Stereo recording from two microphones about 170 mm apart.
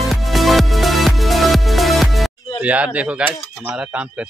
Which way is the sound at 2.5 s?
10° right (ahead or behind).